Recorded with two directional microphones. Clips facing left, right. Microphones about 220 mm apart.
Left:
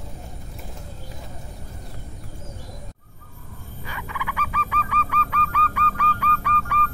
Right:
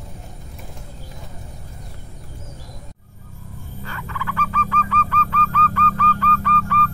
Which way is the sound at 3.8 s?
10° left (ahead or behind).